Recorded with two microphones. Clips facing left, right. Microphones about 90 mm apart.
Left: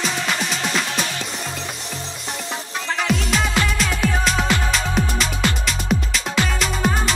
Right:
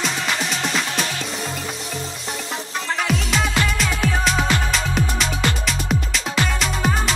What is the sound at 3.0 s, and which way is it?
Music, centre (ahead or behind).